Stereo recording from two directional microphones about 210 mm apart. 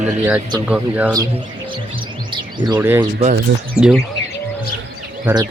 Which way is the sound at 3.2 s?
40° right (ahead or behind).